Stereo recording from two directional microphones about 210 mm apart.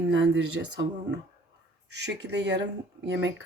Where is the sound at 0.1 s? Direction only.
60° right (ahead or behind).